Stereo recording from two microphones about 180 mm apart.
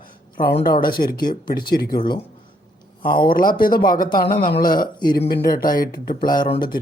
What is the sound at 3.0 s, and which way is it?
Speech, 55° left (ahead or behind).